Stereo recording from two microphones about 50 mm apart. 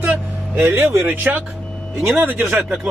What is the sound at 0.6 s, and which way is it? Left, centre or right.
Speech, right.